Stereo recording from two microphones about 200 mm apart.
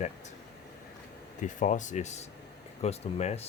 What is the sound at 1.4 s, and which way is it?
Speech, 40° left (ahead or behind).